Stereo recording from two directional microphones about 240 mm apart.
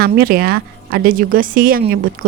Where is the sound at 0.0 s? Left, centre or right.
Right.